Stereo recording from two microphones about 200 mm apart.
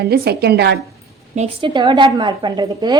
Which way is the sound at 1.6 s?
25° right (ahead or behind).